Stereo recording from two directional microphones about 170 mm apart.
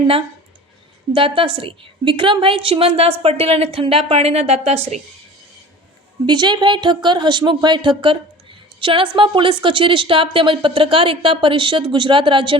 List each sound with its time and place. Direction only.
1.1 s a woman's voice: 30° right (ahead or behind)
6.2 s speech: 25° right (ahead or behind)